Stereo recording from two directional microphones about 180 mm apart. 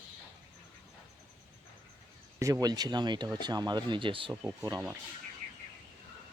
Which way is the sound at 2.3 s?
15° right (ahead or behind).